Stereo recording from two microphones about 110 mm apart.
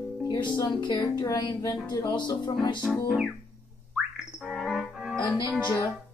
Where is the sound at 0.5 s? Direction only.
40° left (ahead or behind).